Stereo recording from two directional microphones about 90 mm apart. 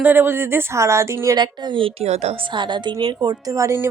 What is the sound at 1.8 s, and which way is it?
A woman's voice, 80° right.